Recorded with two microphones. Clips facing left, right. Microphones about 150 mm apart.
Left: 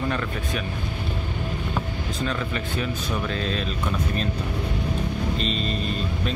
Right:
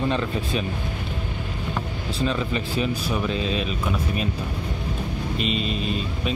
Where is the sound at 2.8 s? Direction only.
10° right (ahead or behind).